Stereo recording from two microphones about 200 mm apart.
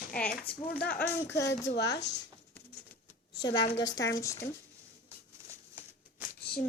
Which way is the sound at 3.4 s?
20° left (ahead or behind).